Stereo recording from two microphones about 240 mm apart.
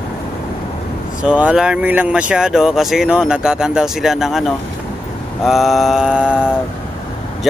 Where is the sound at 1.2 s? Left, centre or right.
Centre.